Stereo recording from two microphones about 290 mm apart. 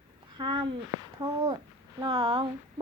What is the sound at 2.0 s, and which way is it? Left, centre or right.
Speech, centre.